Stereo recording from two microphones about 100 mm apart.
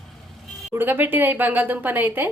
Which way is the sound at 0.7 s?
20° right (ahead or behind).